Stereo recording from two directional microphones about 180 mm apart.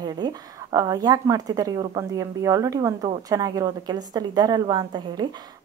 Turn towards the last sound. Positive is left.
turn(degrees=-20)  # may be behind; listen again after turning